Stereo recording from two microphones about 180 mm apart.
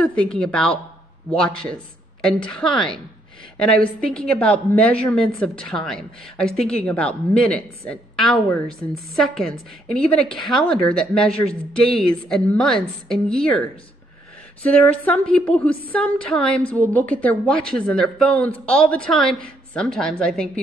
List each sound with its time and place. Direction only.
0.0 s a woman's voice: 5° left (ahead or behind)
2.2 s a woman's voice: 5° left (ahead or behind)